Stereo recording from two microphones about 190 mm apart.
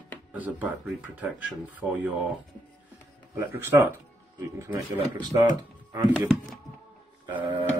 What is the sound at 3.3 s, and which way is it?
Speech, 15° right (ahead or behind).